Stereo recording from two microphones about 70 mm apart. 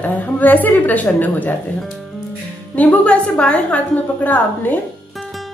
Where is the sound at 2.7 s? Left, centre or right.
Centre.